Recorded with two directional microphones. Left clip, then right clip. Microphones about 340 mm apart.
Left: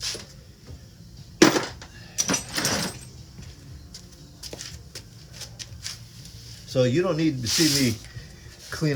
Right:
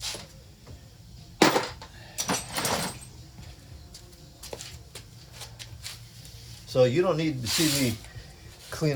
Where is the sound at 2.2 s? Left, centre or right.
Centre.